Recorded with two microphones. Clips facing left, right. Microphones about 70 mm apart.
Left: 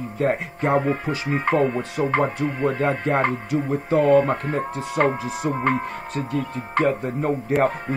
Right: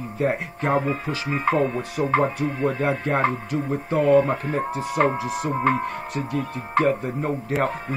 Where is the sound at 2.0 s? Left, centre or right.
Centre.